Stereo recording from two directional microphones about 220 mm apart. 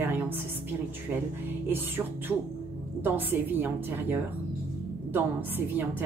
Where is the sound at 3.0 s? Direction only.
10° right (ahead or behind).